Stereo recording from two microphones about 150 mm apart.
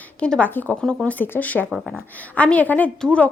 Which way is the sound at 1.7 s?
5° right (ahead or behind).